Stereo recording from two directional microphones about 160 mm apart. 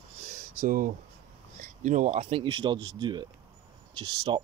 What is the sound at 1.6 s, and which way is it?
Speech, 50° right (ahead or behind).